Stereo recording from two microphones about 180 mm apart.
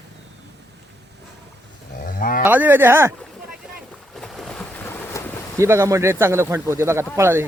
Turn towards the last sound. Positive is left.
turn(degrees=-15)  # may be behind; listen again after turning